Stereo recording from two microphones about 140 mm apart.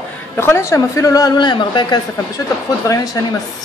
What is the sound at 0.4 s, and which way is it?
A woman's voice, 20° left (ahead or behind).